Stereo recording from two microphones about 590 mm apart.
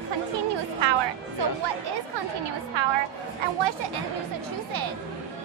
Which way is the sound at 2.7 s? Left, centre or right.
Right.